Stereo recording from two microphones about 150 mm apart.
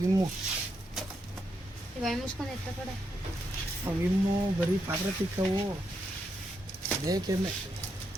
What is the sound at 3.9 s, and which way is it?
Speech, 10° right (ahead or behind).